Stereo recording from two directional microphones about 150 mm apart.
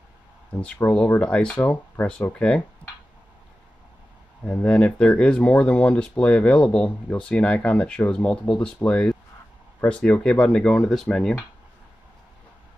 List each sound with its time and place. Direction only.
0.6 s speech: 10° left (ahead or behind)
4.5 s speech: 5° left (ahead or behind)